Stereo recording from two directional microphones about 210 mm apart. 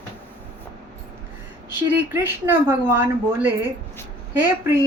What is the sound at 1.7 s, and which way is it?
A woman's voice, 10° right (ahead or behind).